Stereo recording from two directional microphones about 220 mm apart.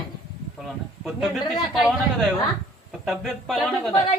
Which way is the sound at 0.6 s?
Centre (ahead or behind).